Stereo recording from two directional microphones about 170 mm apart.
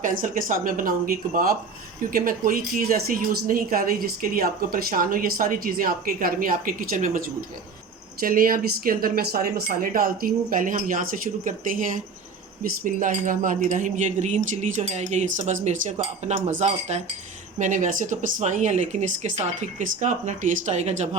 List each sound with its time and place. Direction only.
0.0 s speech: 55° right (ahead or behind)
8.2 s speech: 60° right (ahead or behind); by 21.2 s 40° right (ahead or behind)